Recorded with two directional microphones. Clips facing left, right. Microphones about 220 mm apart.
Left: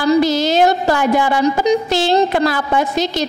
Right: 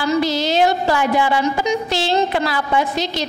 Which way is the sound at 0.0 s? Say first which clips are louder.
Left 5 dB; 40° left (ahead or behind).